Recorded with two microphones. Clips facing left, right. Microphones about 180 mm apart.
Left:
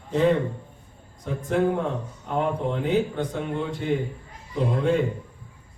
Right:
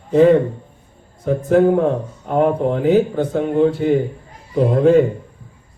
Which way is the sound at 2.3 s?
50° right (ahead or behind).